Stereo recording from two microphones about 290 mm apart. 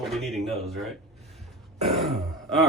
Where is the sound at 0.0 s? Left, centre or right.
Centre.